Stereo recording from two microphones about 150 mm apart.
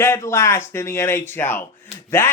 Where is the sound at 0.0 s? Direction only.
20° left (ahead or behind).